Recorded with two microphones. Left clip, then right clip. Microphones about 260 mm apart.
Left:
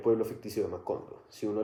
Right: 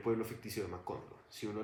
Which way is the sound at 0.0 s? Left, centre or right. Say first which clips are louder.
Left 9 dB; right.